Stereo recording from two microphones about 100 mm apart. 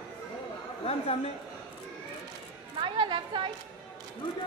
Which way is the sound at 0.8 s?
85° left.